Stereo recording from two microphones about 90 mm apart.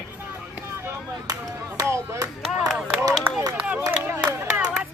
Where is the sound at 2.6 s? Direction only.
5° right (ahead or behind).